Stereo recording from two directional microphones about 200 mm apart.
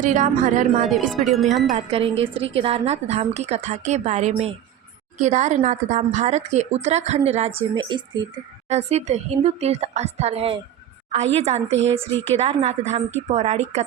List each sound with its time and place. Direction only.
0.0 s a woman's voice: 40° right (ahead or behind)
0.9 s speech: centre (ahead or behind)
1.7 s a woman's voice: 30° right (ahead or behind)
8.7 s a woman's voice: 35° right (ahead or behind)
11.7 s speech: 65° right (ahead or behind)
12.3 s a woman's voice: 30° right (ahead or behind)